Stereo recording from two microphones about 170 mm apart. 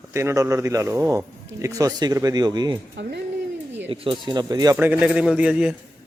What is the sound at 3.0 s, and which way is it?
Speech, 90° right.